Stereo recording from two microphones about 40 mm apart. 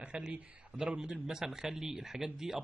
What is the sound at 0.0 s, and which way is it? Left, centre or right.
A man's voice, right.